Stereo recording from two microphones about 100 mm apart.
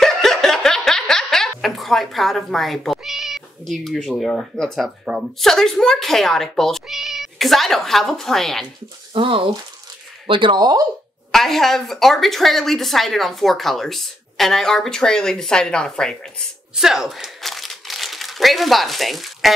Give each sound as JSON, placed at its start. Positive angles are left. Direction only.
{"t": 0.0, "sound": "a sound", "side_deg": 5}
{"t": 4.2, "sound": "speech", "side_deg": 5}
{"t": 9.1, "sound": "speech", "side_deg": -60}
{"t": 11.3, "sound": "speech", "side_deg": 5}
{"t": 16.7, "sound": "crumpling", "side_deg": -5}